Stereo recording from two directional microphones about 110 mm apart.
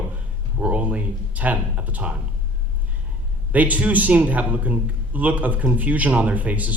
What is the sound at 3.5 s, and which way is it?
A man's voice, 15° right (ahead or behind).